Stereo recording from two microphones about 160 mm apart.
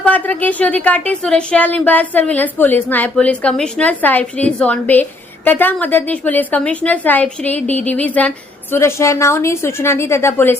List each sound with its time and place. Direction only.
0.0 s a woman's voice: 10° left (ahead or behind)